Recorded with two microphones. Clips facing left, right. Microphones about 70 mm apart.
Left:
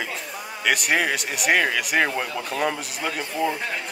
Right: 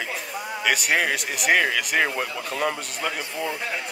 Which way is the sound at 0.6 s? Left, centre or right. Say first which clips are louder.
Left 1 dB; centre.